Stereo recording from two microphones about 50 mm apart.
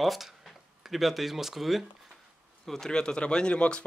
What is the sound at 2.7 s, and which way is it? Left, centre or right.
Speech, centre.